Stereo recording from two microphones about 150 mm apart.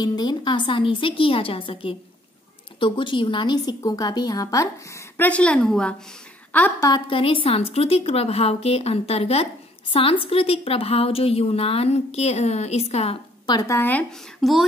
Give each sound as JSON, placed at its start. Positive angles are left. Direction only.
{"t": 0.0, "sound": "a woman's voice", "side_deg": 30}
{"t": 7.1, "sound": "speech", "side_deg": 35}
{"t": 13.5, "sound": "a woman's voice", "side_deg": 25}
{"t": 13.7, "sound": "speech", "side_deg": 10}